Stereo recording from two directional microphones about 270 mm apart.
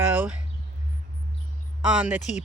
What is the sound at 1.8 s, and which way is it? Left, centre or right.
Speech, centre.